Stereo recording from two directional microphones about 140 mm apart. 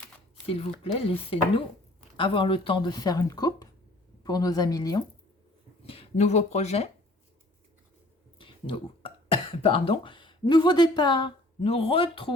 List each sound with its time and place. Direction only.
0.4 s a woman's voice: 45° left (ahead or behind); by 5.0 s 25° left (ahead or behind)
5.8 s speech: 45° left (ahead or behind)
8.4 s burping: 35° left (ahead or behind)
9.6 s speech: 40° left (ahead or behind)